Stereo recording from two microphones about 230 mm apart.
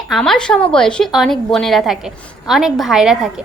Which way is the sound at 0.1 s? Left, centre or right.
Centre.